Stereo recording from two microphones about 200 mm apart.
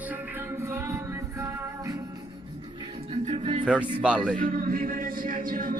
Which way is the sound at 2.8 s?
30° right (ahead or behind).